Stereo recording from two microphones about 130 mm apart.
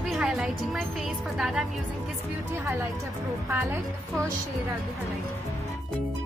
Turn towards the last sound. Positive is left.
turn(degrees=-20)  # may be behind; listen again after turning